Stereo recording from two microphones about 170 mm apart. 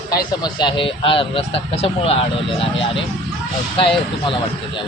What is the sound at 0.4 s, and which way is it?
Speech, 30° left (ahead or behind).